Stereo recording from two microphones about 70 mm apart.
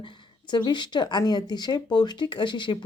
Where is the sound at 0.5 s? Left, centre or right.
Left.